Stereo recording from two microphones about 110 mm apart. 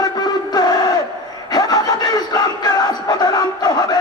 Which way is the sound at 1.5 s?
35° left (ahead or behind).